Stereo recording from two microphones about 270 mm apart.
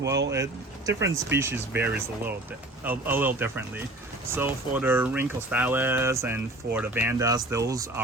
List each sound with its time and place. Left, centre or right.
0.0 s speech: right
0.9 s speech: centre